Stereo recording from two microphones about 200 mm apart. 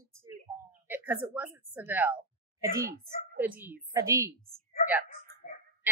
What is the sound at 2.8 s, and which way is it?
Speech, 50° right (ahead or behind).